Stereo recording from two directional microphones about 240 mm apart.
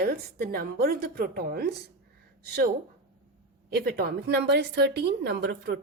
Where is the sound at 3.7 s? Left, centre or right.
Right.